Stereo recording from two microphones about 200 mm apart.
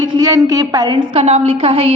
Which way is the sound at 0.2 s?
15° right (ahead or behind).